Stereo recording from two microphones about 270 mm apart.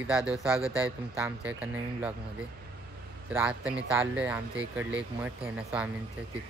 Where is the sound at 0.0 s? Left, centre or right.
Centre.